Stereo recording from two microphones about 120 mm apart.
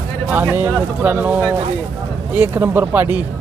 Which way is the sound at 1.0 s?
15° right (ahead or behind).